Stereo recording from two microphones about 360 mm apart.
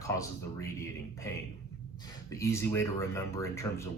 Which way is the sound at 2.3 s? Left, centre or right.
Centre.